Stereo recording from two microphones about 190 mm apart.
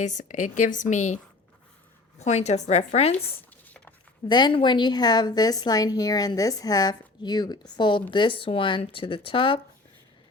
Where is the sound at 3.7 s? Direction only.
10° left (ahead or behind).